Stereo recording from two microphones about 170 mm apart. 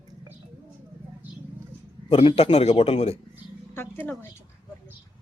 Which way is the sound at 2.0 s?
35° left (ahead or behind).